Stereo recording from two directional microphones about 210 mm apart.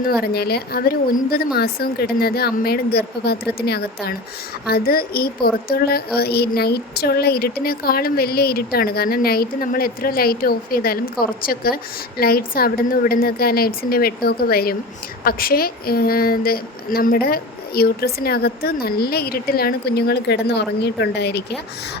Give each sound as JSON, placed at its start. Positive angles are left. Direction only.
{"t": 0.0, "sound": "speech", "side_deg": 50}